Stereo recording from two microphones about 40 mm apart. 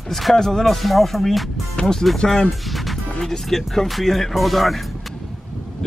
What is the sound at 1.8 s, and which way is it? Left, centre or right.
Speech, centre.